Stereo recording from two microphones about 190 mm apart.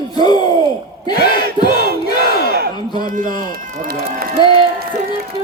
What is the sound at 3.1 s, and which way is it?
Run, 45° right (ahead or behind).